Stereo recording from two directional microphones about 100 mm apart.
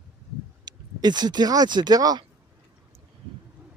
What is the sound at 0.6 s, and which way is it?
Speech, 45° right (ahead or behind).